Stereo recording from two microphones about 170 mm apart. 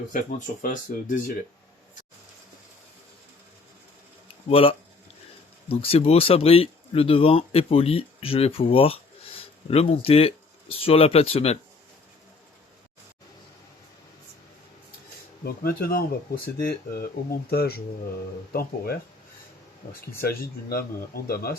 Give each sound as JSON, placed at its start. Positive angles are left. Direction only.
{"t": 0.1, "sound": "speech", "side_deg": 50}
{"t": 4.4, "sound": "speech", "side_deg": 35}
{"t": 15.4, "sound": "speech", "side_deg": 60}